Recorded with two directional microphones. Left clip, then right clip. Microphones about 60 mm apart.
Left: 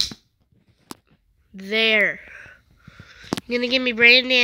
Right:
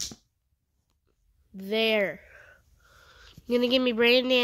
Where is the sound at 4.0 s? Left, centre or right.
Right.